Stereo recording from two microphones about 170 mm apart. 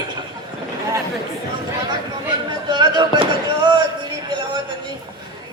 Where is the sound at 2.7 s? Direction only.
25° right (ahead or behind).